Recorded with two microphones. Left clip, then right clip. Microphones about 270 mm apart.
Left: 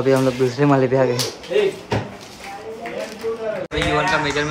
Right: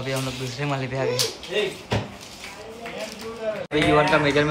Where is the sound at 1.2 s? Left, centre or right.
Centre.